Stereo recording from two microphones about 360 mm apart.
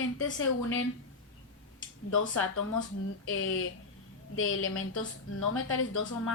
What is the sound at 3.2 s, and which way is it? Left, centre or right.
A woman's voice, left.